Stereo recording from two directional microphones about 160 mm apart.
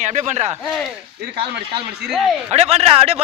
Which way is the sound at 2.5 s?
40° right (ahead or behind).